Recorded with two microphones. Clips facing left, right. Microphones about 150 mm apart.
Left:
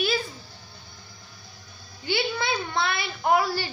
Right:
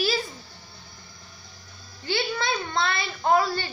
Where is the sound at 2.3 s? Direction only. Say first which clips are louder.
Even; 5° left (ahead or behind).